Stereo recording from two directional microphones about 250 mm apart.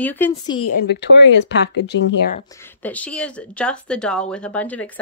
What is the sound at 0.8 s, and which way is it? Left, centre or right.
Speech, left.